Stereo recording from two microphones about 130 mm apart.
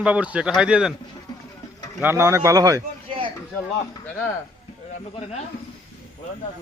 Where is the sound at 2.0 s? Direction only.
20° right (ahead or behind).